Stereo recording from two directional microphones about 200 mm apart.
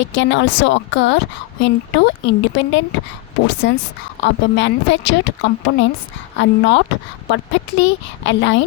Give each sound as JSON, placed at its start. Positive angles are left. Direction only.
{"t": 0.0, "sound": "speech", "side_deg": 70}